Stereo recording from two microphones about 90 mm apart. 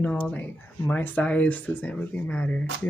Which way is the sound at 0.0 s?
15° left (ahead or behind).